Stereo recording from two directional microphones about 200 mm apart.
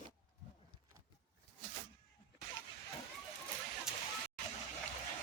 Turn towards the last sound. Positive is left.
turn(degrees=0)  # may be behind; listen again after turning